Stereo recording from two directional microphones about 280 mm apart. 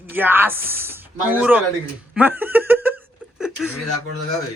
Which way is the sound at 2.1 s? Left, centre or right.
Centre.